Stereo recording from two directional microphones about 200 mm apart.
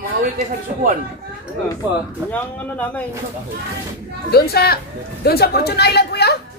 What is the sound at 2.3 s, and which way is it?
Speech, 10° left (ahead or behind).